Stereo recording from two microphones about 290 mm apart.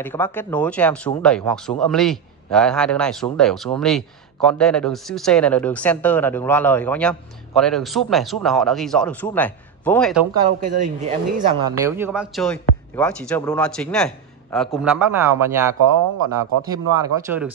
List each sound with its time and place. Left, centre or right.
0.0 s a man's voice: centre
10.6 s speech: right
11.6 s a man's voice: centre